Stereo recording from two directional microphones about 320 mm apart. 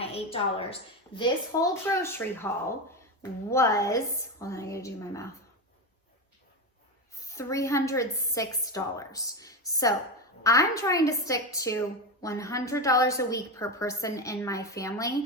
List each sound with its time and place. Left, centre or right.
0.0 s a woman's voice: centre
7.2 s a woman's voice: centre